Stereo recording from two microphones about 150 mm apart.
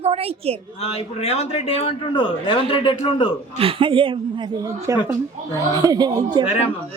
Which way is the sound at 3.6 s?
35° right (ahead or behind).